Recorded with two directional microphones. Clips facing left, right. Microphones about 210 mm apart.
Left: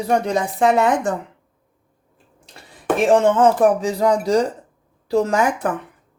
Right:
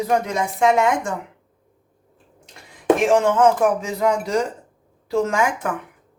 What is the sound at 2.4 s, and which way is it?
Speech, 35° left (ahead or behind).